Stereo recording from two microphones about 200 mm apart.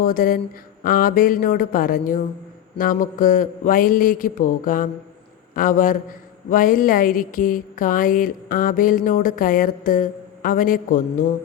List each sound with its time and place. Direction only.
0.0 s a woman's voice: 45° left (ahead or behind)